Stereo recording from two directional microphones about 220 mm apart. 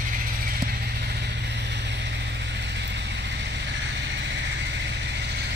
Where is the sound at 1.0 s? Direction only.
45° right (ahead or behind).